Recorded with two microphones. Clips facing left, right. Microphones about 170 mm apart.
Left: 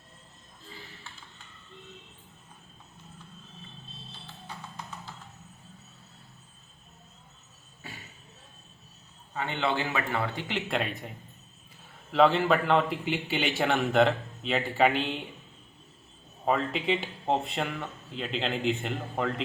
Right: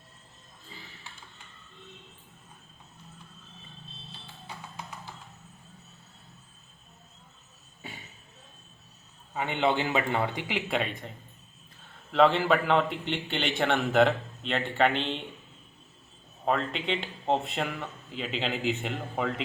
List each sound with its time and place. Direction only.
9.3 s a man's voice: 15° right (ahead or behind)
10.5 s a man's voice: centre (ahead or behind)
12.1 s a man's voice: centre (ahead or behind)
16.5 s a man's voice: 5° left (ahead or behind)